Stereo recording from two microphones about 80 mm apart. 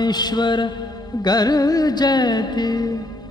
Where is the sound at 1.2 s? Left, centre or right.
Left.